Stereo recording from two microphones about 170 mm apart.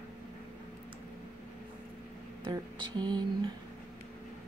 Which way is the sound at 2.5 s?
25° right (ahead or behind).